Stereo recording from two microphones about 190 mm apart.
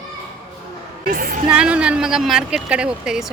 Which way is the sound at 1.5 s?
5° right (ahead or behind).